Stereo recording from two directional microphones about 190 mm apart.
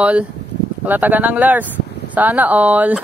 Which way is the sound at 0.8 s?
10° right (ahead or behind).